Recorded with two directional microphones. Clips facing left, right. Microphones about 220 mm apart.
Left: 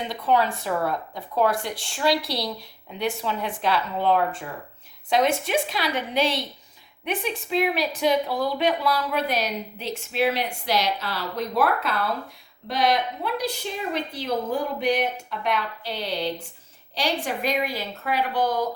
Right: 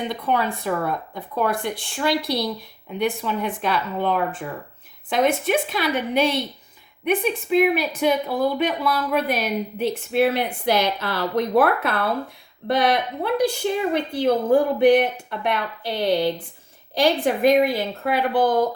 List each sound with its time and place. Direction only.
0.1 s speech: 55° right (ahead or behind)
5.0 s speech: 55° right (ahead or behind)